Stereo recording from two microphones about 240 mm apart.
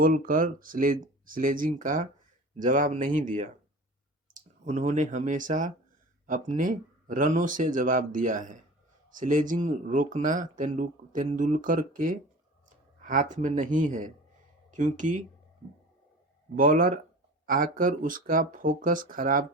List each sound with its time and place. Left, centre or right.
0.0 s speech: right
4.6 s speech: right
16.6 s speech: right